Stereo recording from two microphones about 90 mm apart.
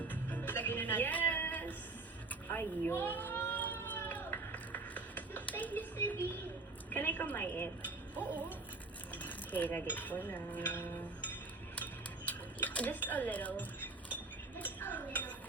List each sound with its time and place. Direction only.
0.1 s music: 20° left (ahead or behind)
2.3 s a sound: 20° left (ahead or behind)
6.9 s a woman's voice: 20° left (ahead or behind)
8.2 s music: 20° right (ahead or behind)
9.1 s cutlery: 20° left (ahead or behind)